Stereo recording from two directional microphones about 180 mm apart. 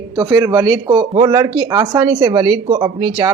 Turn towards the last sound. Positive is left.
turn(degrees=-25)  # may be behind; listen again after turning